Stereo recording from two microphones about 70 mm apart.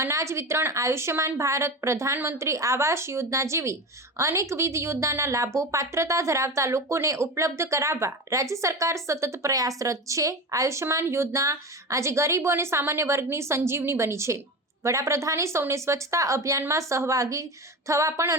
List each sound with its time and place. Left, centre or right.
0.0 s a woman's voice: right